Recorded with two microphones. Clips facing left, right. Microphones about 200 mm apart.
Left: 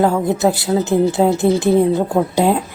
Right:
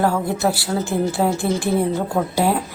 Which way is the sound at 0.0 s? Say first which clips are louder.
Left 4 dB; 20° left (ahead or behind).